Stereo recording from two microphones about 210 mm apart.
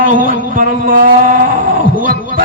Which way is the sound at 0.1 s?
40° right (ahead or behind).